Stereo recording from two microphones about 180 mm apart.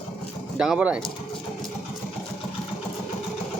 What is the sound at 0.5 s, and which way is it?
Speech, 5° right (ahead or behind).